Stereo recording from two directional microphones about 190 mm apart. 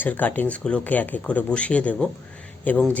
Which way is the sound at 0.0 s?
10° left (ahead or behind).